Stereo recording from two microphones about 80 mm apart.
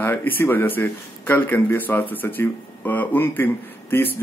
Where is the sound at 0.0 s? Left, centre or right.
Left.